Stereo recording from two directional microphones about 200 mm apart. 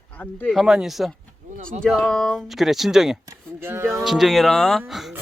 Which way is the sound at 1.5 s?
40° right (ahead or behind).